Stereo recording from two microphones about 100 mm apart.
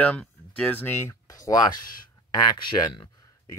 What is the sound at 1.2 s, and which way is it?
Speech, 35° left (ahead or behind).